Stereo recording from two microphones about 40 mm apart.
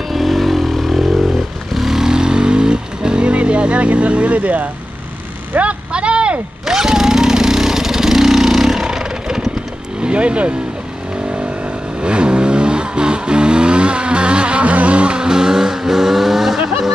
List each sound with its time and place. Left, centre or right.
0.1 s vehicle: centre; by 4.6 s right
5.6 s a sound: right
6.6 s vehicle: centre
10.0 s speech: right
12.0 s vehicle: right; by 16.5 s centre